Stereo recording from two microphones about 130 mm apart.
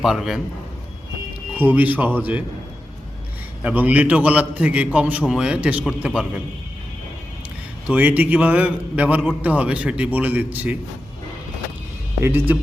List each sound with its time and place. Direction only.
0.0 s a man's voice: 5° right (ahead or behind)
1.5 s a man's voice: 15° right (ahead or behind)
3.6 s a man's voice: 10° right (ahead or behind)
7.9 s a man's voice: 10° right (ahead or behind)
12.2 s a man's voice: 15° right (ahead or behind)